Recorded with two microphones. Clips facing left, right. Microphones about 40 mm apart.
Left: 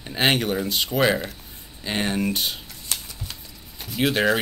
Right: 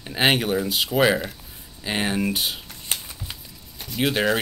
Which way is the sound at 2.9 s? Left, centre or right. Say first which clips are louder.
Right 2 dB; right.